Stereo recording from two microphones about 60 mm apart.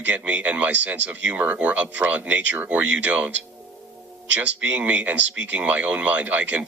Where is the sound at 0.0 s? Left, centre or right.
Right.